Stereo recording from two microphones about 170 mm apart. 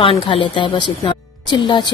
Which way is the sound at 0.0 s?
30° left (ahead or behind).